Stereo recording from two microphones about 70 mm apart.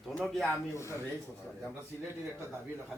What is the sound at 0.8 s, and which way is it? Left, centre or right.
Speech, left.